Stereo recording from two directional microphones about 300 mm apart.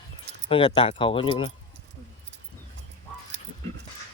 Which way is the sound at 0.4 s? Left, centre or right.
Centre.